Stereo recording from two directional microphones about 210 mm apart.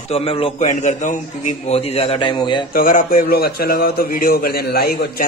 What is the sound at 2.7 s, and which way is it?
A man's voice, 40° left (ahead or behind).